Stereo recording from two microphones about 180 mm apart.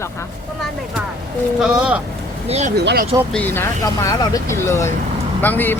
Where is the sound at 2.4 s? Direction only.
35° right (ahead or behind).